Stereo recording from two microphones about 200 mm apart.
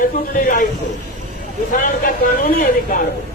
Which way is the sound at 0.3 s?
45° left (ahead or behind).